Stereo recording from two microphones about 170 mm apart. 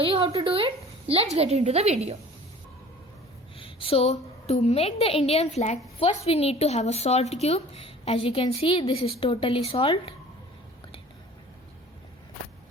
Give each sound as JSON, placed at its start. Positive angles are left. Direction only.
{"t": 0.0, "sound": "a woman's voice", "side_deg": -35}
{"t": 3.6, "sound": "a woman's voice", "side_deg": 30}